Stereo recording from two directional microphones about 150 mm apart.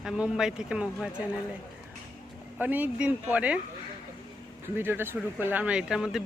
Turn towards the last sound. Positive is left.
turn(degrees=-5)  # may be behind; listen again after turning